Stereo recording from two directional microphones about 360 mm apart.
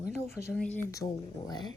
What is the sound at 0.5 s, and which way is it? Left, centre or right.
A woman's voice, centre.